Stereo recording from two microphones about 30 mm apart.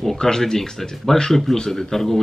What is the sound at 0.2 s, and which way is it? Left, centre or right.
Speech, left.